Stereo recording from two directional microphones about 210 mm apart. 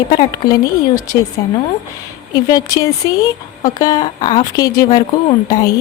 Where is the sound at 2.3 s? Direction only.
20° left (ahead or behind).